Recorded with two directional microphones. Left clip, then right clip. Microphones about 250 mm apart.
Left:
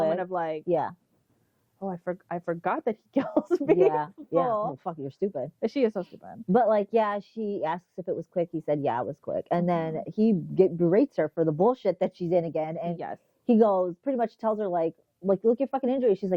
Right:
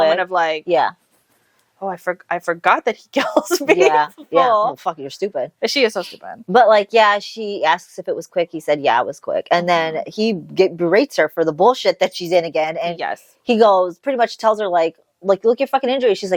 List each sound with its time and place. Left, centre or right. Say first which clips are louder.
0.0 s a woman's voice: right 11 dB; centre
11.4 s speech: right 9 dB; right
11.7 s a woman's voice: right 10 dB; centre